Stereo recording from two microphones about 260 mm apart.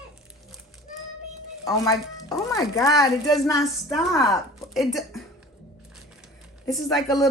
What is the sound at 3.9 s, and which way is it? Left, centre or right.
A woman's voice, centre.